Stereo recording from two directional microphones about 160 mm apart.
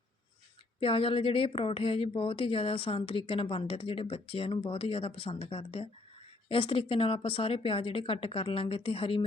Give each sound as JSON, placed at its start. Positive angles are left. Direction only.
{"t": 0.8, "sound": "a woman's voice", "side_deg": 35}